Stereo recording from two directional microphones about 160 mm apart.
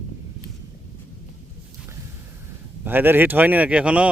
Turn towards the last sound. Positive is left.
turn(degrees=-5)  # may be behind; listen again after turning